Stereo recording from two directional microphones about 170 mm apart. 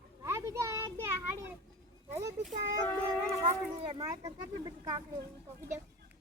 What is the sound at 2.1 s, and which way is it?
Speech, 20° right (ahead or behind).